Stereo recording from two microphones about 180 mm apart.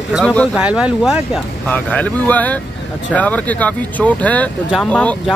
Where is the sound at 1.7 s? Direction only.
10° left (ahead or behind).